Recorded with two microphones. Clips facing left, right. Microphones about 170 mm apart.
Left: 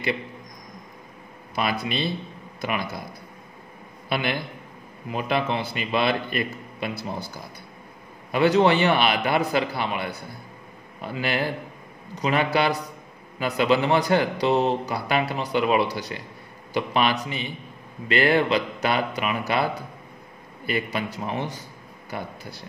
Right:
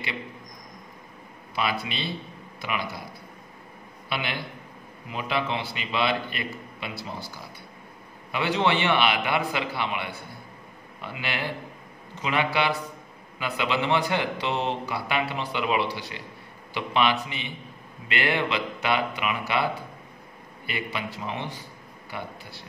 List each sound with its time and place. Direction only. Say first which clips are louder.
1.5 s a man's voice: left 3 dB; 45° left (ahead or behind)
4.1 s a man's voice: left 5 dB; 45° left (ahead or behind)
8.3 s a man's voice: left 6 dB; 40° left (ahead or behind)